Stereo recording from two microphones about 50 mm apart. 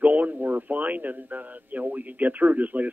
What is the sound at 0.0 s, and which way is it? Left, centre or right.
Speech, right.